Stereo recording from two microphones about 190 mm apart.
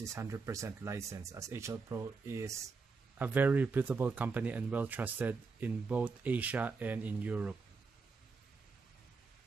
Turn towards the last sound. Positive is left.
turn(degrees=-10)  # may be behind; listen again after turning